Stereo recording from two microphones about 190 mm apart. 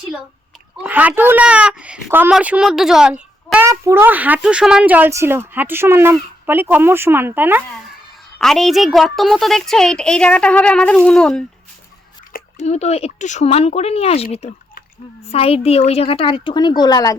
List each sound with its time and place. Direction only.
0.8 s speech: 10° right (ahead or behind)
8.4 s a woman's voice: centre (ahead or behind)
12.5 s a woman's voice: 35° left (ahead or behind); by 17.2 s 20° left (ahead or behind)